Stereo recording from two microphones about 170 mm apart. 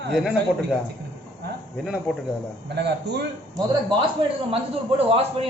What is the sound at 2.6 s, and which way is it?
Speech, 90° right.